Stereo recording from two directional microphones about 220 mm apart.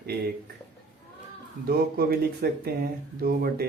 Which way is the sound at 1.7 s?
45° right (ahead or behind).